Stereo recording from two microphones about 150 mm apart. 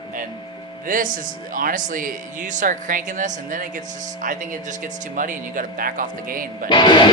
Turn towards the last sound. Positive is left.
turn(degrees=30)  # may be behind; listen again after turning